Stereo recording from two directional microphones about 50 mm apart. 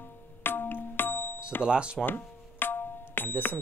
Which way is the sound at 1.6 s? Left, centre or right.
Centre.